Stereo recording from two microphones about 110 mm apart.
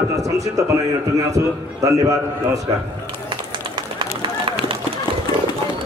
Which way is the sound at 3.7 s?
50° right (ahead or behind).